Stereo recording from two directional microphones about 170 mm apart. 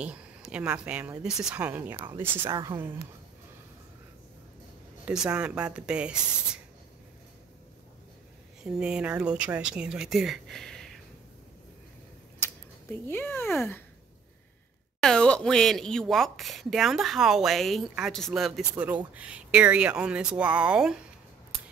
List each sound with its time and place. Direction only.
0.0 s speech: 5° right (ahead or behind)
2.5 s a woman's voice: 20° right (ahead or behind)
5.0 s speech: 5° right (ahead or behind)
8.6 s speech: 5° right (ahead or behind)
12.9 s speech: 10° left (ahead or behind)
15.0 s speech: 5° left (ahead or behind)